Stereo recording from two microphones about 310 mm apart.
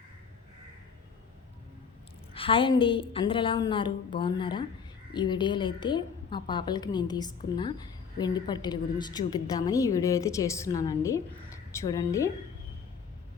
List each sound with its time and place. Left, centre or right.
2.3 s a woman's voice: centre